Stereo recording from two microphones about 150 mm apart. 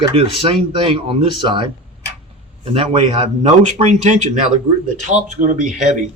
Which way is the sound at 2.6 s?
45° right (ahead or behind).